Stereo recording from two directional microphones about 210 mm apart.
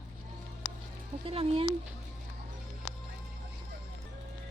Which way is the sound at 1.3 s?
25° right (ahead or behind).